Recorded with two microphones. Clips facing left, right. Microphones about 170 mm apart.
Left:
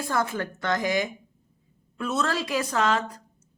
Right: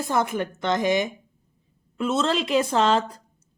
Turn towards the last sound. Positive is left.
turn(degrees=-30)  # may be behind; listen again after turning